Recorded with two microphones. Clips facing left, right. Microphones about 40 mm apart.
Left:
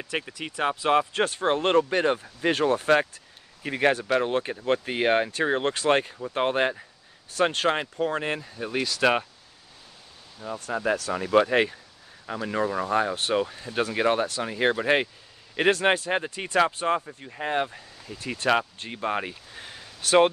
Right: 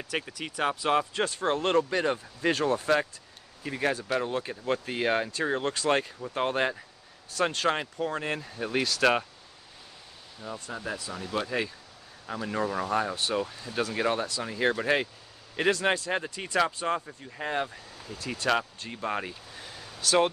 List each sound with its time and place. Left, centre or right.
0.0 s speech: centre
1.1 s speech: left
2.8 s speech: left
8.4 s speech: centre
10.4 s speech: centre
10.9 s speech: left
11.2 s speech: left
12.3 s speech: centre
13.3 s speech: left
17.3 s speech: centre